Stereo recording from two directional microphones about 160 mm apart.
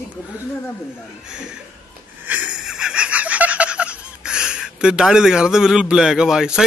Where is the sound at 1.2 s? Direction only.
5° right (ahead or behind).